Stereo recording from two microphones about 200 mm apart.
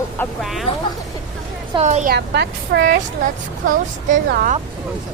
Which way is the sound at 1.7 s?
35° right (ahead or behind).